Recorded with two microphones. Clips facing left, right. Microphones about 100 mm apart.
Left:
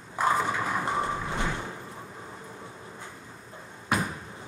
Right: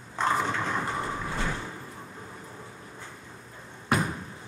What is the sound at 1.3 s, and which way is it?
Sliding door, 20° left (ahead or behind).